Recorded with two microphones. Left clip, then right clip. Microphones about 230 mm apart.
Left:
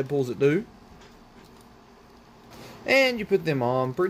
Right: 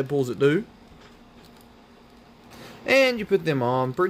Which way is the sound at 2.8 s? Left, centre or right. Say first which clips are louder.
Right 2 dB; centre.